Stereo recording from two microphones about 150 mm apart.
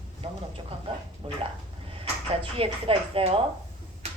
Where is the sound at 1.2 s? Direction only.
40° right (ahead or behind).